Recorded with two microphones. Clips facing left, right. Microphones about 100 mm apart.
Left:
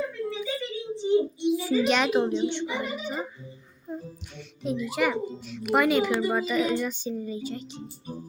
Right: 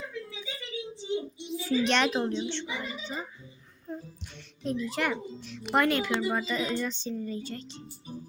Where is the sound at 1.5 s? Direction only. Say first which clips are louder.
Left 1 dB; 5° left (ahead or behind).